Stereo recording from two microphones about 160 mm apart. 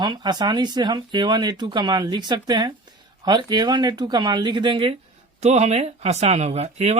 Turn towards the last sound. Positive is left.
turn(degrees=-40)  # may be behind; listen again after turning